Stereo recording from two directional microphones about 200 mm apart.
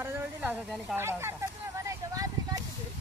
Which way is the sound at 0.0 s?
10° right (ahead or behind).